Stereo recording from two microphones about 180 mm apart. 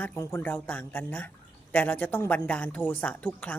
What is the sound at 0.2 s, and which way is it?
Speech, 15° left (ahead or behind).